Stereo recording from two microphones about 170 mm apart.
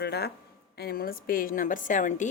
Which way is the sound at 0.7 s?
65° left (ahead or behind).